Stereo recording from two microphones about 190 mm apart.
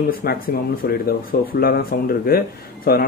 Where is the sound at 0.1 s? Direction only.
50° left (ahead or behind).